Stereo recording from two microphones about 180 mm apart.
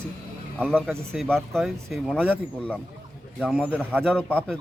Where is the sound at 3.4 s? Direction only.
10° right (ahead or behind).